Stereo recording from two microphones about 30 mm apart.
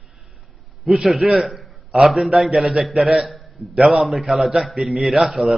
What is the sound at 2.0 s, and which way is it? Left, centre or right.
A man's voice, centre.